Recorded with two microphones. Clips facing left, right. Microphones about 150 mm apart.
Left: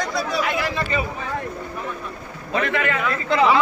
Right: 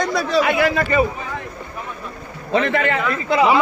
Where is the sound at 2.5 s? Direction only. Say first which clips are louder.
Right 4 dB; 30° right (ahead or behind).